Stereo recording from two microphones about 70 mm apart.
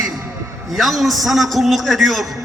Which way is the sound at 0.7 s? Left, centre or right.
Centre.